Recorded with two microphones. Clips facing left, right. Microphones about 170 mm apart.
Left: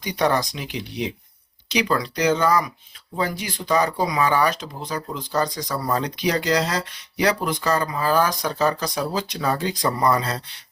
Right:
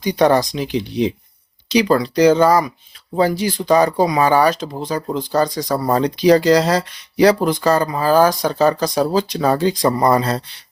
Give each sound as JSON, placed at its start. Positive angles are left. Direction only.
{"t": 0.0, "sound": "speech", "side_deg": -35}